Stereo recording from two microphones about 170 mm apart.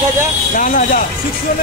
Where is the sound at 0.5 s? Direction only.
50° left (ahead or behind).